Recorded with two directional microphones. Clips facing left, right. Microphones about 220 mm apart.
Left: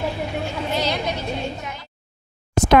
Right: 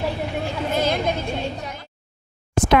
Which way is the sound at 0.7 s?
50° right (ahead or behind).